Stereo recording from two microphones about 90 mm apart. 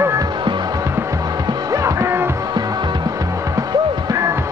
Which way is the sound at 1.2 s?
45° right (ahead or behind).